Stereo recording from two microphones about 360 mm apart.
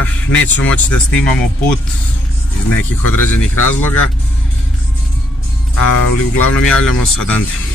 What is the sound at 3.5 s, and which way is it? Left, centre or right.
Speech, left.